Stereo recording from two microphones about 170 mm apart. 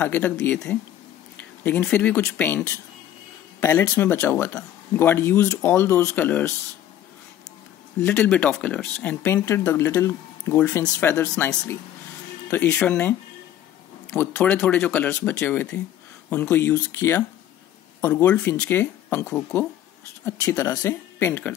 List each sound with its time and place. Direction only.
0.0 s speech: 10° left (ahead or behind)
8.0 s speech: 5° left (ahead or behind)
14.1 s speech: 10° left (ahead or behind)